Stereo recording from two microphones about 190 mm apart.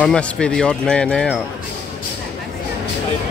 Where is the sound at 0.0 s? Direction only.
5° left (ahead or behind).